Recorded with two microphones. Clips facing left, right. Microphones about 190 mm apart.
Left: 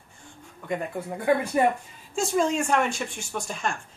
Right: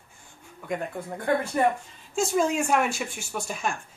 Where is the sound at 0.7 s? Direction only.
5° left (ahead or behind).